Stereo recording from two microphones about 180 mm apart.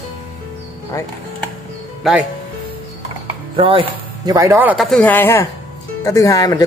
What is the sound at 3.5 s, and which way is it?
Speech, 30° right (ahead or behind).